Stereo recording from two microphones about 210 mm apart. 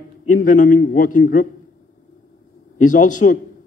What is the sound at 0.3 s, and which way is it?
A man's voice, 40° left (ahead or behind).